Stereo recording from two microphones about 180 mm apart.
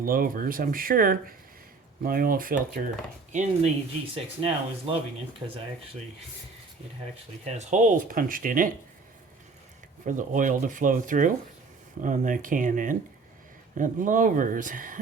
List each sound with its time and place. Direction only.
0.0 s speech: 50° right (ahead or behind)
3.3 s speech: 35° right (ahead or behind)
7.4 s speech: 40° right (ahead or behind)
10.1 s speech: 45° right (ahead or behind)